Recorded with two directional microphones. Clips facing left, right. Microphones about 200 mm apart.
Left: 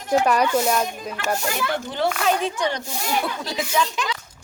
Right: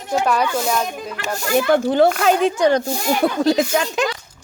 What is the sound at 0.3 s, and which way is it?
Speech, 10° left (ahead or behind).